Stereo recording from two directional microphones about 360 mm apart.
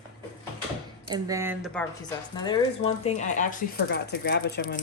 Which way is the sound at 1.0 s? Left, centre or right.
Centre.